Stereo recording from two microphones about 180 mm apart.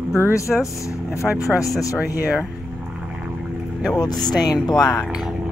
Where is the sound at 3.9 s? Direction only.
20° left (ahead or behind).